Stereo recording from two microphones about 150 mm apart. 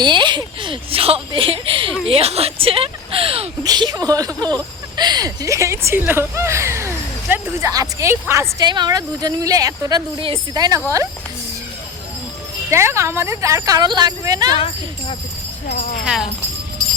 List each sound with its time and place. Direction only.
0.0 s speech: 30° right (ahead or behind)
3.6 s speech: 25° right (ahead or behind)
10.2 s speech: 35° right (ahead or behind)
10.6 s speech: 25° right (ahead or behind)
12.7 s speech: 20° right (ahead or behind)